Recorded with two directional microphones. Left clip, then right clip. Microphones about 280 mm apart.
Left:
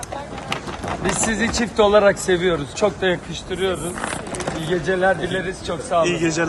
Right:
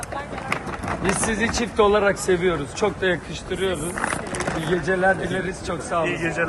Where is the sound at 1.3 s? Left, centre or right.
Left.